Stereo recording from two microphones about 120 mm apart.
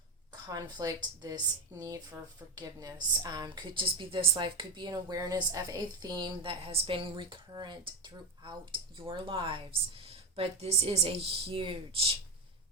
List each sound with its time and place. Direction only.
0.5 s a woman's voice: 30° right (ahead or behind); by 12.1 s 45° right (ahead or behind)